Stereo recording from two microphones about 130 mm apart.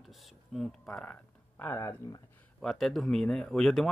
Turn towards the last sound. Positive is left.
turn(degrees=0)  # may be behind; listen again after turning